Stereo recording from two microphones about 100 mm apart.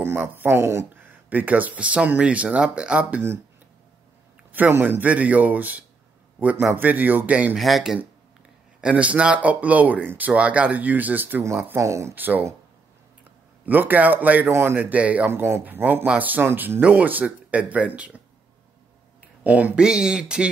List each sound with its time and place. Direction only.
0.0 s speech: 20° right (ahead or behind)
4.5 s speech: 20° right (ahead or behind)
7.5 s speech: centre (ahead or behind)
8.8 s speech: 10° right (ahead or behind)
13.7 s speech: 15° right (ahead or behind)
19.4 s speech: 15° right (ahead or behind)